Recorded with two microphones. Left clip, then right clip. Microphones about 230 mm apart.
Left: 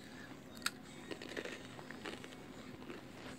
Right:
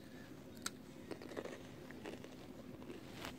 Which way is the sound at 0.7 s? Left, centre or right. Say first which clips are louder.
Left 6 dB; centre.